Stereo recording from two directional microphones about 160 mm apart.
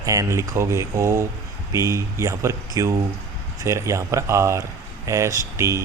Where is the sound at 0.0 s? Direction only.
20° right (ahead or behind).